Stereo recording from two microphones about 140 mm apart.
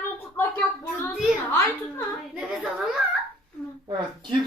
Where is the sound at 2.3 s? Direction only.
5° right (ahead or behind).